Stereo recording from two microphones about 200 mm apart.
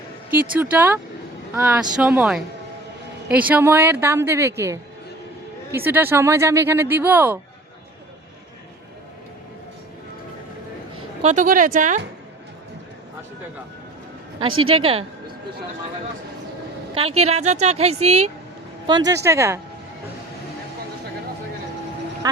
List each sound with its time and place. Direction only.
0.3 s speech: 10° right (ahead or behind)
11.2 s a woman's voice: 35° right (ahead or behind)
14.6 s a woman's voice: 25° right (ahead or behind)
16.9 s a woman's voice: 30° right (ahead or behind)
18.9 s speech: 20° right (ahead or behind)